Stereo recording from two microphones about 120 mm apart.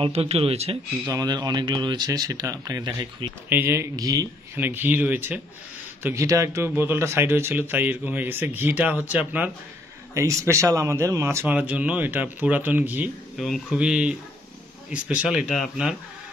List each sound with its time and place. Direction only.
0.0 s speech: 55° right (ahead or behind)
1.0 s speech: 35° right (ahead or behind)
3.4 s speech: 15° right (ahead or behind)
4.6 s speech: 15° right (ahead or behind)
6.0 s speech: 25° right (ahead or behind)
10.1 s speech: 25° right (ahead or behind)
13.4 s a man's voice: centre (ahead or behind)